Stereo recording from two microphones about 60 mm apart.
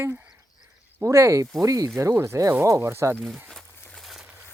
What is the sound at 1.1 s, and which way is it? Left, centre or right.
Speech, right.